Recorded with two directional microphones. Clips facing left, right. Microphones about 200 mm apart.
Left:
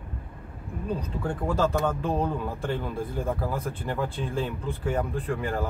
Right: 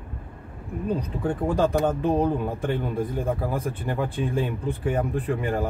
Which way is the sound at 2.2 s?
15° right (ahead or behind).